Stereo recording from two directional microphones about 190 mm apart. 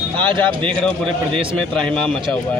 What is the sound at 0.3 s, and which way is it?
A man's voice, 25° right (ahead or behind).